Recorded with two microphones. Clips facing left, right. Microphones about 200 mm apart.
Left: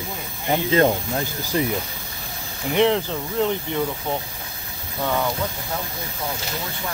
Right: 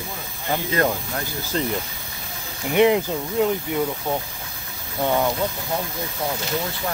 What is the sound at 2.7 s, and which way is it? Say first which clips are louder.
Speech: right 2 dB; 5° right (ahead or behind).